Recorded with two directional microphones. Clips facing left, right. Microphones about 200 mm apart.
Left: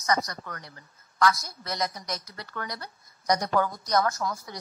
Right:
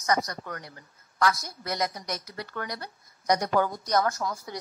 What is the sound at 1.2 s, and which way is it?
A woman's voice, 30° right (ahead or behind).